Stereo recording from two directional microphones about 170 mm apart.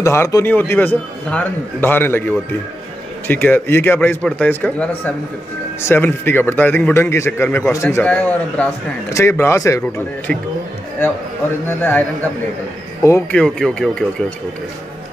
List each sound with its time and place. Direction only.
0.0 s a man's voice: 15° left (ahead or behind)
11.8 s a man's voice: 10° left (ahead or behind)
13.4 s speech: 5° left (ahead or behind)